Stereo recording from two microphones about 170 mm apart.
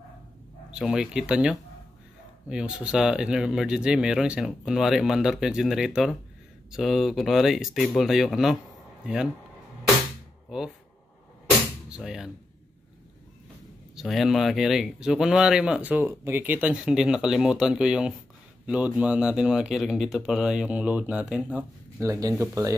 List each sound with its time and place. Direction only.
0.7 s speech: 5° right (ahead or behind)
11.9 s speech: 5° right (ahead or behind)
13.9 s speech: centre (ahead or behind); by 22.8 s 20° right (ahead or behind)